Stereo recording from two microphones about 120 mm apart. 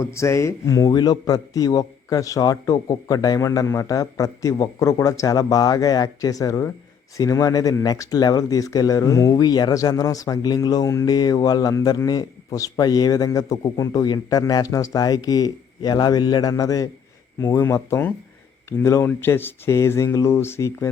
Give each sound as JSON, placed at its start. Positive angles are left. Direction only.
{"t": 0.0, "sound": "a man's voice", "side_deg": 25}